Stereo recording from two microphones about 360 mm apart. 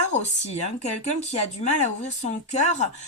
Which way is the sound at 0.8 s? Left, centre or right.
Centre.